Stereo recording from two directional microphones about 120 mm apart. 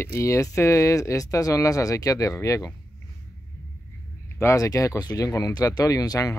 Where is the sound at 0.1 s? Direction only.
25° left (ahead or behind).